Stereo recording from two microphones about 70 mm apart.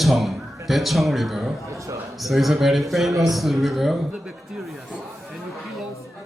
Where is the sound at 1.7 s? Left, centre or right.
Right.